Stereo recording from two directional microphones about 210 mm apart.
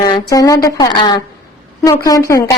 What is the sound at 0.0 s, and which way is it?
A woman's voice, 15° left (ahead or behind).